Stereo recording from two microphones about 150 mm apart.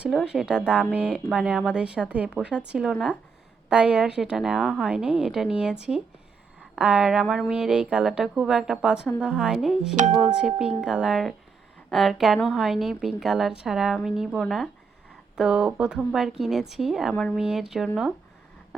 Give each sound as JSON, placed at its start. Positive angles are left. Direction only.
{"t": 0.0, "sound": "a woman's voice", "side_deg": -5}